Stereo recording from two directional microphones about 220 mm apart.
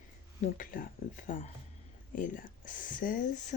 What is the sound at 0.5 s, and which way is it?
Speech, 40° left (ahead or behind).